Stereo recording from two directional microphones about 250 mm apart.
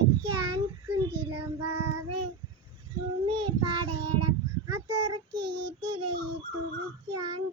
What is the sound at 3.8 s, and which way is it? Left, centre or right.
Child singing, right.